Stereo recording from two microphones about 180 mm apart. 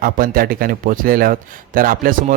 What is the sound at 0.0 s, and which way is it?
A man's voice, 50° right (ahead or behind).